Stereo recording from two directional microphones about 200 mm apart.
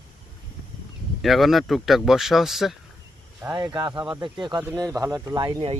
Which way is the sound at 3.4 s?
15° right (ahead or behind).